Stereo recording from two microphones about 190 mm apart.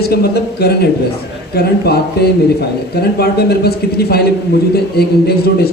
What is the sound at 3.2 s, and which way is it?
A man's voice, 55° left (ahead or behind).